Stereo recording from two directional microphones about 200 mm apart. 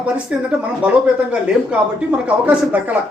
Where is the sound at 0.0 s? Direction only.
5° right (ahead or behind).